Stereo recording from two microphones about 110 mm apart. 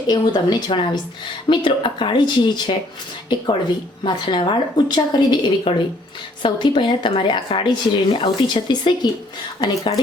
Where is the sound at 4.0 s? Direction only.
45° left (ahead or behind).